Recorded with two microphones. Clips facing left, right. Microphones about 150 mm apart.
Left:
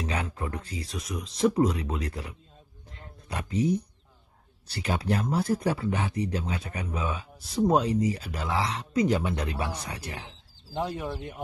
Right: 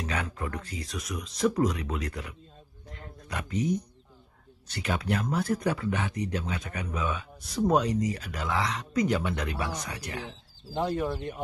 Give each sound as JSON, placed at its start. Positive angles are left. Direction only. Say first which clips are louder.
{"t": 0.0, "sound": "speech", "louder": "left 1 dB", "side_deg": 25}
{"t": 2.9, "sound": "a sound", "louder": "even", "side_deg": 30}
{"t": 4.6, "sound": "speech", "louder": "left 1 dB", "side_deg": 30}
{"t": 10.7, "sound": "speech", "louder": "right 3 dB", "side_deg": 0}